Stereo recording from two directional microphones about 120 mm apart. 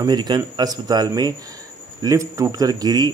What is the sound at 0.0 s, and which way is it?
A man's voice, 35° right (ahead or behind).